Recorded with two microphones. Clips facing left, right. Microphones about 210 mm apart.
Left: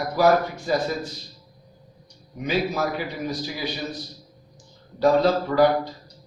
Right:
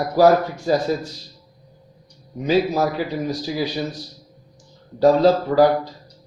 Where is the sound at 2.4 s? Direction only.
35° right (ahead or behind).